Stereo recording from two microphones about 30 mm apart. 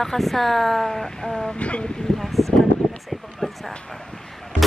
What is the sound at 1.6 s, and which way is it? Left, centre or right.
Speech, left.